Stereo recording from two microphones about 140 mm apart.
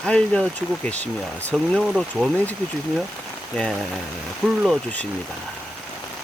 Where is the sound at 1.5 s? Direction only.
Centre (ahead or behind).